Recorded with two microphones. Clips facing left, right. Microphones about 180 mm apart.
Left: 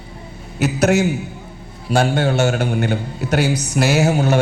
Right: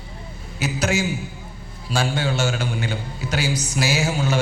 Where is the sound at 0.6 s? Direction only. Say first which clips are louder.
Left 7 dB; 60° left (ahead or behind).